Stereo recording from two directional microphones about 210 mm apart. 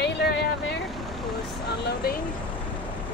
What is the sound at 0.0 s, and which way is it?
Vehicle, 55° left (ahead or behind).